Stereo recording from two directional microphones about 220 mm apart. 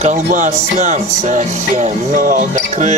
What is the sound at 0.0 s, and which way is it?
Speech, 35° right (ahead or behind).